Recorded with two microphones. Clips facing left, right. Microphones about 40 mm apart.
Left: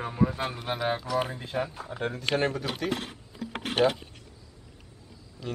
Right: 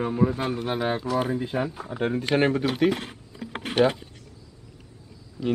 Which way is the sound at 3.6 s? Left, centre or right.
Right.